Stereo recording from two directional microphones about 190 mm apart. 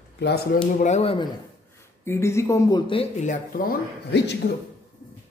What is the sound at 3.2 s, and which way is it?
Speech, 45° left (ahead or behind).